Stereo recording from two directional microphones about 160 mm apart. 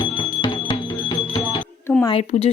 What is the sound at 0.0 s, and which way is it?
Music, 30° left (ahead or behind).